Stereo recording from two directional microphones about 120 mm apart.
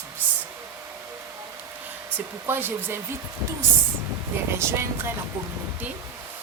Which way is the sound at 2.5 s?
15° right (ahead or behind).